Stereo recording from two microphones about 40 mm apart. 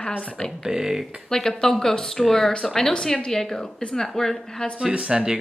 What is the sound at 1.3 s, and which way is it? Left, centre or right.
A woman's voice, centre.